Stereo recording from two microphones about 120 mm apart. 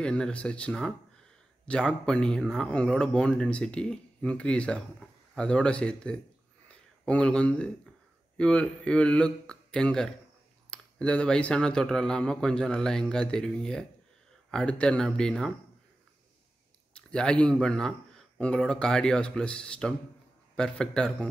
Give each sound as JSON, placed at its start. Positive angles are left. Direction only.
{"t": 0.0, "sound": "speech", "side_deg": 10}
{"t": 16.9, "sound": "speech", "side_deg": 5}